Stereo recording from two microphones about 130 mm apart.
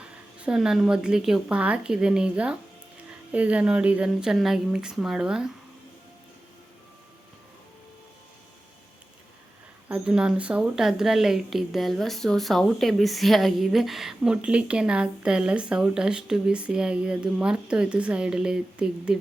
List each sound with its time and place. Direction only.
0.0 s a woman's voice: 10° right (ahead or behind)
9.9 s a woman's voice: 5° right (ahead or behind)